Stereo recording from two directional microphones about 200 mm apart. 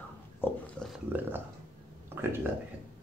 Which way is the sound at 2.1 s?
10° right (ahead or behind).